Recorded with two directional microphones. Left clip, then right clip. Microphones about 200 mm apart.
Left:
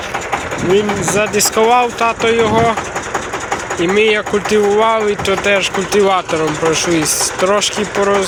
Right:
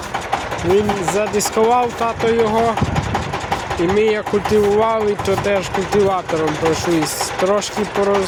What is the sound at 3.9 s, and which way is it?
Speech, 10° right (ahead or behind).